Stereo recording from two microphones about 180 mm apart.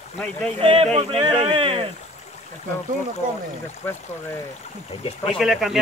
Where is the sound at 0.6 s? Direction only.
30° right (ahead or behind).